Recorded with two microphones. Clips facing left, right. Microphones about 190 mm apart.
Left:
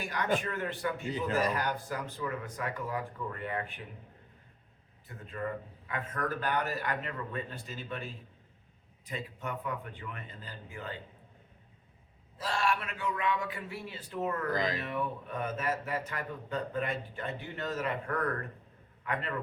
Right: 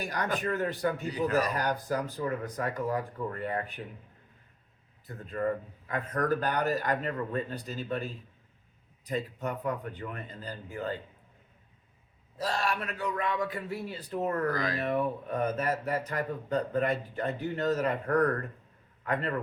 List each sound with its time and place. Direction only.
0.0 s speech: 40° right (ahead or behind)
5.0 s speech: 40° right (ahead or behind)
12.4 s speech: 40° right (ahead or behind)
14.5 s speech: 20° left (ahead or behind)
14.8 s a man's voice: 40° right (ahead or behind)